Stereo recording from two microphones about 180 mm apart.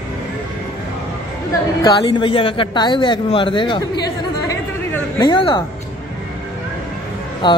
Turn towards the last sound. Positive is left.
turn(degrees=25)  # may be behind; listen again after turning